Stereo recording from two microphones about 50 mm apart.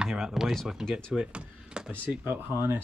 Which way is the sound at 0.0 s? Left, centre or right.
Centre.